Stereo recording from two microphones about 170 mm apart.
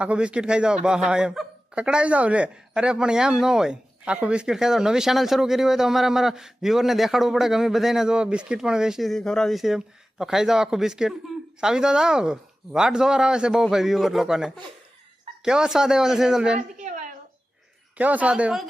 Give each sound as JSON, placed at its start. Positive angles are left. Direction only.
{"t": 0.0, "sound": "a man's voice", "side_deg": -5}
{"t": 16.6, "sound": "a woman's voice", "side_deg": -45}
{"t": 17.9, "sound": "speech", "side_deg": -10}